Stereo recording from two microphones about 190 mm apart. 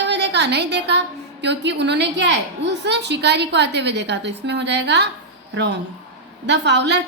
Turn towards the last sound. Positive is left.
turn(degrees=-65)  # may be behind; listen again after turning